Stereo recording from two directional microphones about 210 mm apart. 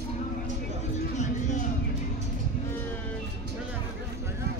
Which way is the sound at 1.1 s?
35° left (ahead or behind).